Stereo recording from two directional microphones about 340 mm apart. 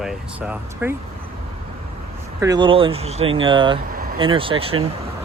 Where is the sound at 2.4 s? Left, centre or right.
Centre.